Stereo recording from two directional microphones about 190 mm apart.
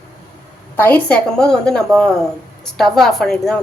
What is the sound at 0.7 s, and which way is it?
A woman's voice, 10° left (ahead or behind).